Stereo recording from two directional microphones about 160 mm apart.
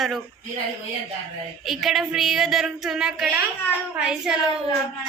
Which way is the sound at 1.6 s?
Centre (ahead or behind).